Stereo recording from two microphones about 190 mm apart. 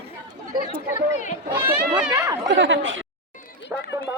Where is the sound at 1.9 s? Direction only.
20° right (ahead or behind).